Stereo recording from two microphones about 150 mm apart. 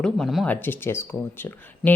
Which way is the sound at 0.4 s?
10° left (ahead or behind).